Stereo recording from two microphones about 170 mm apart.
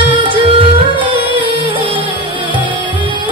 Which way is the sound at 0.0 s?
30° right (ahead or behind).